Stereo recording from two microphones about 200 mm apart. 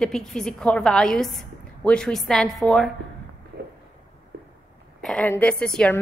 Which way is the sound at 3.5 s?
55° right (ahead or behind).